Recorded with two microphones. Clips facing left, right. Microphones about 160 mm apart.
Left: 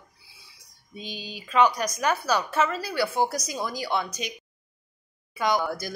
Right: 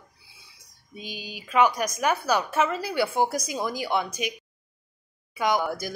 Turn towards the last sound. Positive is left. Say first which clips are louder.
# even
turn(degrees=-15)  # may be behind; listen again after turning